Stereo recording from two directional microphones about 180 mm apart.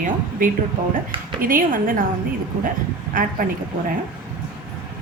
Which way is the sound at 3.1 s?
50° right (ahead or behind).